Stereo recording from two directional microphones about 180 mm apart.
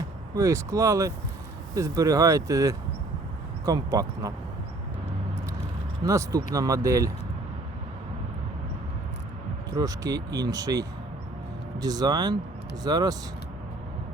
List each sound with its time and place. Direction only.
0.3 s speech: 15° right (ahead or behind)
6.1 s speech: 15° right (ahead or behind)
9.7 s speech: 20° right (ahead or behind)